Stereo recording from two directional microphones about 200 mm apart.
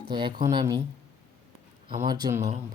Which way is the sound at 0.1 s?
25° right (ahead or behind).